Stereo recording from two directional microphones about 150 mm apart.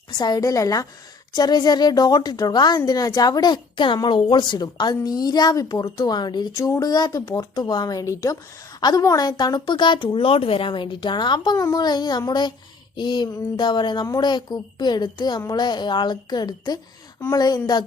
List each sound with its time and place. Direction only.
0.2 s speech: 25° left (ahead or behind)